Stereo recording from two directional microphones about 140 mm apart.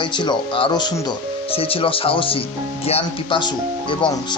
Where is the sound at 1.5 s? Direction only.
40° left (ahead or behind).